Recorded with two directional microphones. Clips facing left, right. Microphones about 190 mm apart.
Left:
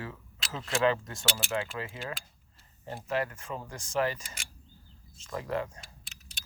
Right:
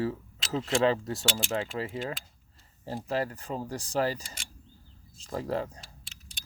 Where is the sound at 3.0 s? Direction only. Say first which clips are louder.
Right 1 dB; 35° right (ahead or behind).